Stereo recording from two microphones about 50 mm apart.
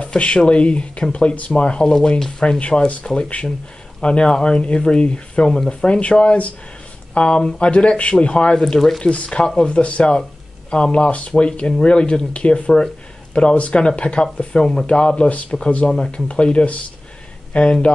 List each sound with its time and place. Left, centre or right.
0.0 s speech: left
1.9 s rub: centre
2.6 s speech: left
9.0 s speech: left